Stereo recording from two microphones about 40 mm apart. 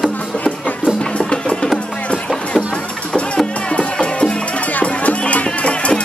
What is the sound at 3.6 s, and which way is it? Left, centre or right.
Music, left.